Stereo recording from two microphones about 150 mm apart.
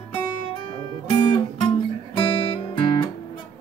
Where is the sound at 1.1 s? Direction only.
35° left (ahead or behind).